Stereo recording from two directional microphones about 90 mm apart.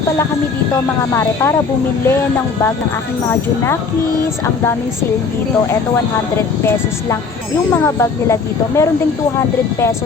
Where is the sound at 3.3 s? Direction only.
30° left (ahead or behind).